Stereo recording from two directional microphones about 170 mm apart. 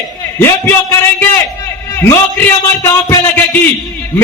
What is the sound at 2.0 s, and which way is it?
A man's voice, 15° left (ahead or behind).